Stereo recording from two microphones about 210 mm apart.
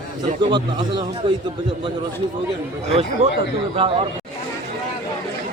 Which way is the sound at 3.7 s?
25° right (ahead or behind).